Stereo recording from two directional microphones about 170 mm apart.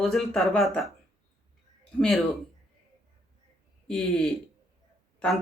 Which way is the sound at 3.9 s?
Centre (ahead or behind).